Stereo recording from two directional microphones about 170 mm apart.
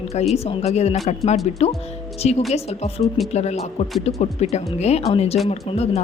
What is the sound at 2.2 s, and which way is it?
A woman's voice, 35° left (ahead or behind).